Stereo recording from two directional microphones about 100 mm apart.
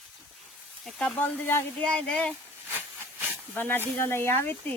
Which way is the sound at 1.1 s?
15° left (ahead or behind).